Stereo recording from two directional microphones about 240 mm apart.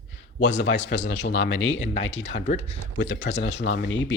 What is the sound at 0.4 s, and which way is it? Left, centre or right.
Speech, left.